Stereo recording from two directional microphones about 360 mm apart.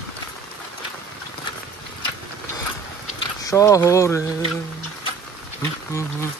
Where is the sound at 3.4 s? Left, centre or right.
Centre.